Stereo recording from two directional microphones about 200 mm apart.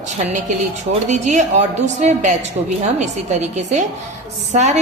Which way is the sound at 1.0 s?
35° right (ahead or behind).